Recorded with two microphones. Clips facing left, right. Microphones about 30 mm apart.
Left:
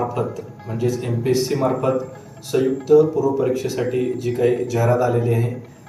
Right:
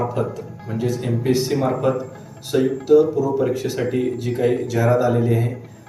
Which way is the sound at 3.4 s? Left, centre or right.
Centre.